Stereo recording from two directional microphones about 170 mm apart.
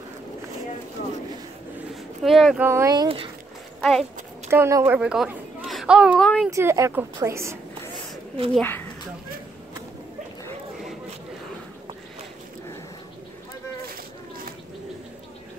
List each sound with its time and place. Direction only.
2.2 s speech: centre (ahead or behind)
2.6 s speech: 15° right (ahead or behind)
3.8 s speech: 5° left (ahead or behind)
4.5 s a woman's voice: 15° right (ahead or behind)
5.0 s speech: 5° right (ahead or behind)
6.5 s a woman's voice: 15° right (ahead or behind)
8.5 s speech: 10° left (ahead or behind)
13.8 s a sound: 60° right (ahead or behind)